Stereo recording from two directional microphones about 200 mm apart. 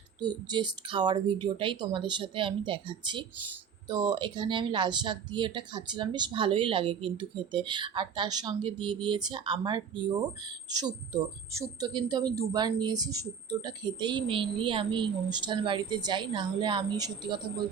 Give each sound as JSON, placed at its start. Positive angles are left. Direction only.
{"t": 0.2, "sound": "speech", "side_deg": -20}